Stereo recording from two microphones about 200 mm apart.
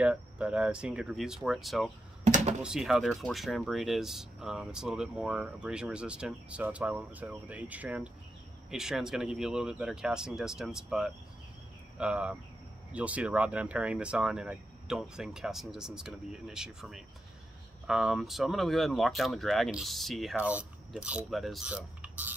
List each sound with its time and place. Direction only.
0.0 s speech: 5° right (ahead or behind)
2.2 s a sound: 35° right (ahead or behind)
2.6 s speech: centre (ahead or behind)